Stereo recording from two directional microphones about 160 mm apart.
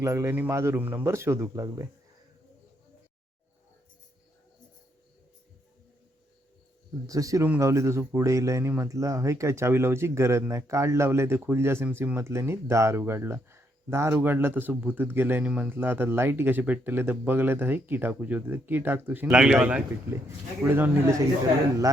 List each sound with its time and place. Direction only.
0.0 s speech: 20° right (ahead or behind)
7.1 s speech: 20° right (ahead or behind)